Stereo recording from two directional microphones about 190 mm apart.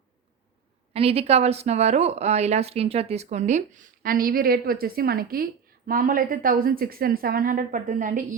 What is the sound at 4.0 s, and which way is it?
A woman's voice, 50° right (ahead or behind).